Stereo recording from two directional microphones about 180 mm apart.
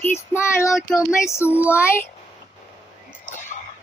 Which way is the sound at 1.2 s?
15° left (ahead or behind).